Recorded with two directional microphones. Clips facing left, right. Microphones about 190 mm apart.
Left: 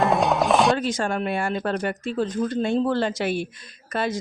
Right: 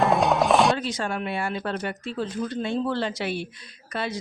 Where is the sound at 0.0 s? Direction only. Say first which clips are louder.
Even; centre (ahead or behind).